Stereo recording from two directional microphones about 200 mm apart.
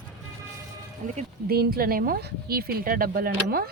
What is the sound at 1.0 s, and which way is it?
Speech, 35° right (ahead or behind).